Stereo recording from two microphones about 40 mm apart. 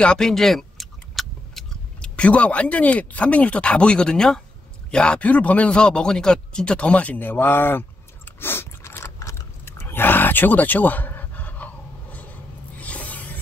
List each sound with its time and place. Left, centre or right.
0.2 s keys jangling: centre
2.0 s speech: left
5.2 s speech: left
5.8 s speech: left
7.2 s speech: left
8.4 s a sound: left
9.7 s a sound: left